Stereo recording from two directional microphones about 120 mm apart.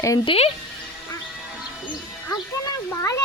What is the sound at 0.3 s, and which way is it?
Speech, 55° left (ahead or behind).